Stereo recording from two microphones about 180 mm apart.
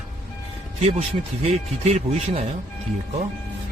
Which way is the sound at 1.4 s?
40° right (ahead or behind).